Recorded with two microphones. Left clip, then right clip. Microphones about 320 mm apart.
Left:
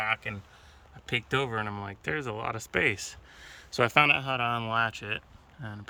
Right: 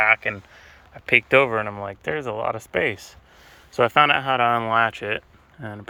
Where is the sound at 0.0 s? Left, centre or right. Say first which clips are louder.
Right 12 dB; centre.